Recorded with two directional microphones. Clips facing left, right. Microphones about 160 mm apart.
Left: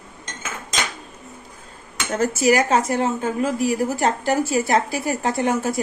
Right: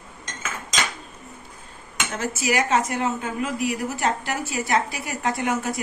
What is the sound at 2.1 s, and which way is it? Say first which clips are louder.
A woman's voice: left 7 dB; 40° left (ahead or behind).